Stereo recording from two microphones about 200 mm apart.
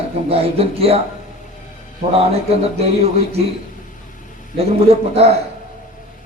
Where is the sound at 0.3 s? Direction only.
30° right (ahead or behind).